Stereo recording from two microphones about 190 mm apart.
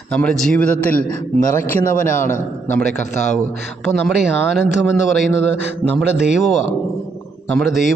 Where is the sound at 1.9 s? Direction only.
45° left (ahead or behind).